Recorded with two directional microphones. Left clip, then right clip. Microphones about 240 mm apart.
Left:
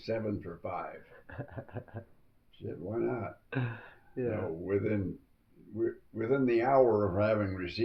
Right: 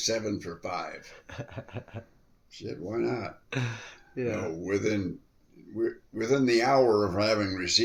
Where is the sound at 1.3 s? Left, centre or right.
Right.